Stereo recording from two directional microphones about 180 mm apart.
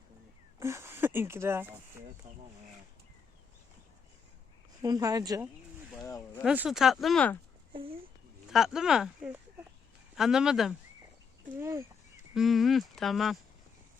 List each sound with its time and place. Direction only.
0.6 s speech: 15° right (ahead or behind)
2.3 s speech: 40° right (ahead or behind)
4.8 s speech: 20° right (ahead or behind)
6.1 s speech: 20° left (ahead or behind)
6.4 s speech: 5° right (ahead or behind)
7.7 s a sound: 30° right (ahead or behind)
8.4 s speech: centre (ahead or behind)
11.6 s speech: 15° right (ahead or behind)
12.3 s speech: centre (ahead or behind)